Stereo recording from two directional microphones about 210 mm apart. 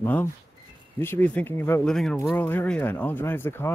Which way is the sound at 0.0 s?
10° left (ahead or behind).